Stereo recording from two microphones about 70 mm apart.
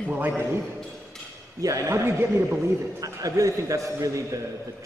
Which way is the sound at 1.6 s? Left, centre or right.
Right.